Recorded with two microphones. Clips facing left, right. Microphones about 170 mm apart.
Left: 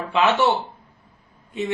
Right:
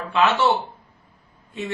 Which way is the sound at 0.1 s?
20° left (ahead or behind).